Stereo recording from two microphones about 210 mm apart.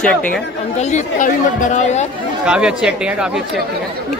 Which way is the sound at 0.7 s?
35° left (ahead or behind).